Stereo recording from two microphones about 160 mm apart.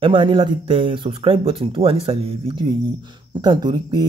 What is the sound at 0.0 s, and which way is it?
Speech, 30° right (ahead or behind).